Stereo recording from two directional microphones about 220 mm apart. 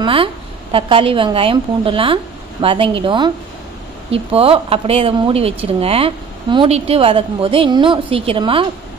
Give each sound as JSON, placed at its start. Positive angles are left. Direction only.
{"t": 0.0, "sound": "speech", "side_deg": -25}